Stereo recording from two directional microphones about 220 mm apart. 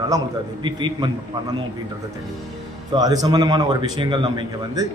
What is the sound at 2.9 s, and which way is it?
A man's voice, 15° right (ahead or behind).